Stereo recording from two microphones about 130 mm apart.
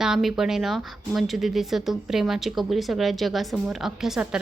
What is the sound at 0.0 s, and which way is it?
Speech, 5° right (ahead or behind).